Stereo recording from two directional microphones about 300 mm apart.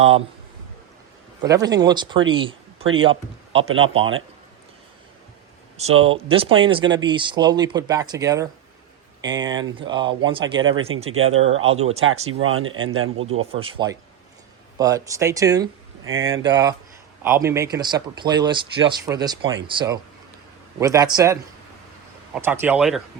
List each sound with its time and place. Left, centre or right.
1.4 s speech: centre
2.3 s a sound: centre
3.0 s speech: centre
6.0 s speech: centre
10.6 s speech: right
13.4 s speech: centre
16.0 s speech: right
16.4 s speech: centre
22.4 s speech: centre